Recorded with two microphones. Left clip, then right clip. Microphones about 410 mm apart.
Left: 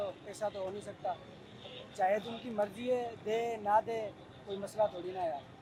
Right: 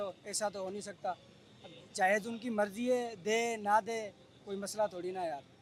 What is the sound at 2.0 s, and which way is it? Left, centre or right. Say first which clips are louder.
Speech: right 1 dB; right.